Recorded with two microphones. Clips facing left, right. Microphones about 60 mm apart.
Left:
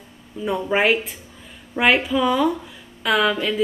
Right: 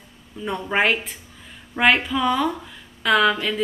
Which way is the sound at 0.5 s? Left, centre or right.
Centre.